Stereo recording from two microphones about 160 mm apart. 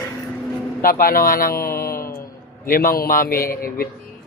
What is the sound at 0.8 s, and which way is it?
A man's voice, 65° left (ahead or behind).